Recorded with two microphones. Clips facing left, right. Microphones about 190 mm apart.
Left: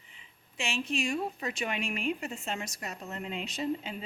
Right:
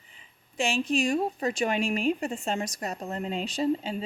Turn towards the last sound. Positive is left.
turn(degrees=-30)  # may be behind; listen again after turning